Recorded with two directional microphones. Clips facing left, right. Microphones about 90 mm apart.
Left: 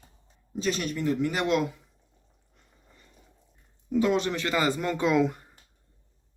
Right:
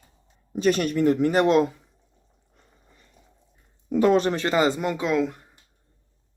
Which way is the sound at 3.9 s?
45° right (ahead or behind).